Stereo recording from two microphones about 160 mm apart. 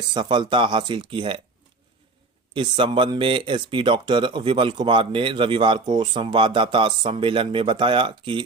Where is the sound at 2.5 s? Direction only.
30° right (ahead or behind).